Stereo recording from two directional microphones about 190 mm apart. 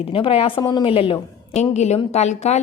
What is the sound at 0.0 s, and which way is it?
A woman's voice, 30° left (ahead or behind).